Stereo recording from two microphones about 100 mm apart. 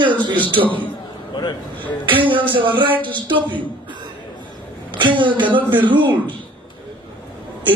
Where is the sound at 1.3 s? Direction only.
45° left (ahead or behind).